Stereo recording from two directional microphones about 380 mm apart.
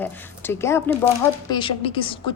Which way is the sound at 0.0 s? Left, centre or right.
Centre.